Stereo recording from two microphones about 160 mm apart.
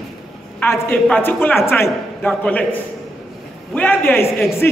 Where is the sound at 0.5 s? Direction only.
15° left (ahead or behind).